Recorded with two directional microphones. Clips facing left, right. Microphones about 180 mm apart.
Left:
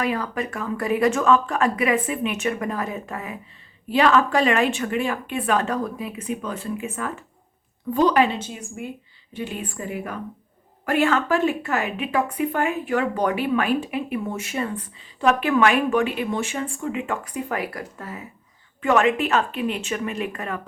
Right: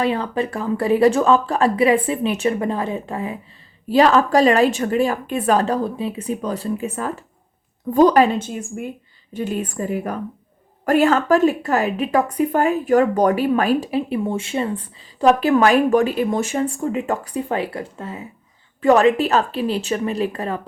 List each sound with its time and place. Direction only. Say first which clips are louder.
0.0 s a woman's voice: right 4 dB; 30° right (ahead or behind)